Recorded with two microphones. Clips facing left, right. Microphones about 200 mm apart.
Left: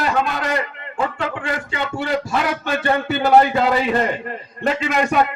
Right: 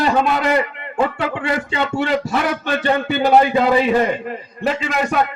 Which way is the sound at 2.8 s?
20° right (ahead or behind).